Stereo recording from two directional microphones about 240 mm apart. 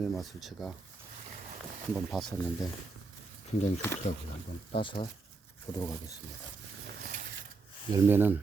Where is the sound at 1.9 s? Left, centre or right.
Centre.